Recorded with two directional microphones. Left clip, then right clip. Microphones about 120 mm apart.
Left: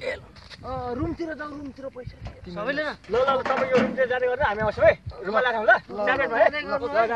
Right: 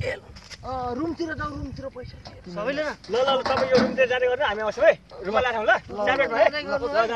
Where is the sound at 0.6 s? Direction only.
Centre (ahead or behind).